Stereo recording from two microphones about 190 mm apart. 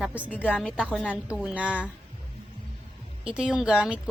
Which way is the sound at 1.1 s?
5° right (ahead or behind).